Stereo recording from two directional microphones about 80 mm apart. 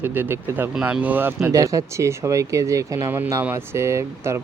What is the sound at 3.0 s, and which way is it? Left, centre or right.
Speech, right.